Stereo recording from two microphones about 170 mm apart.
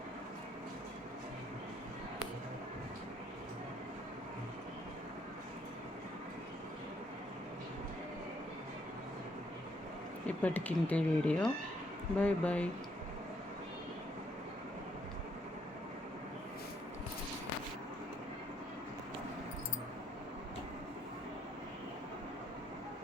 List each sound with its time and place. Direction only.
10.2 s speech: 10° left (ahead or behind)